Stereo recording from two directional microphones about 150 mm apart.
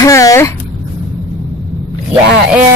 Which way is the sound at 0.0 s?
20° left (ahead or behind).